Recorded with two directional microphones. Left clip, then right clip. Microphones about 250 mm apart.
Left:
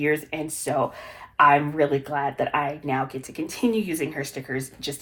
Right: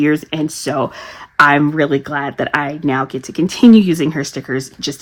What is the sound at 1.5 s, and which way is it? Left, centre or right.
Speech, right.